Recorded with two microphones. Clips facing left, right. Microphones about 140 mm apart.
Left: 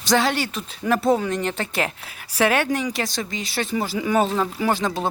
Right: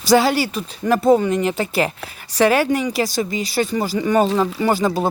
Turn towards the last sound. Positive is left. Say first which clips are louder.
# right 4 dB
turn(degrees=-5)  # may be behind; listen again after turning